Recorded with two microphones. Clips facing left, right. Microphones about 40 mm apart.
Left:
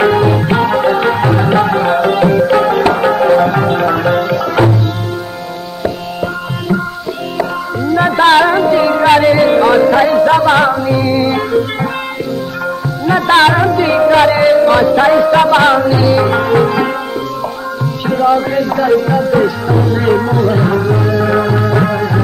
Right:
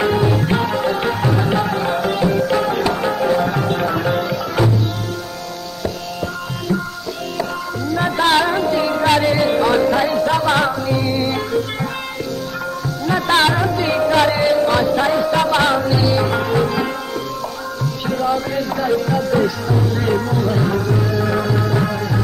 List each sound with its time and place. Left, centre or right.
0.0 s music: left
4.6 s tabla: left
5.8 s music: left
13.0 s music: left
18.0 s music: left
18.6 s music: centre